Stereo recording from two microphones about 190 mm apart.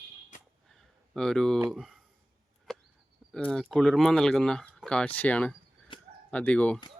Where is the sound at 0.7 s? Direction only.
5° left (ahead or behind).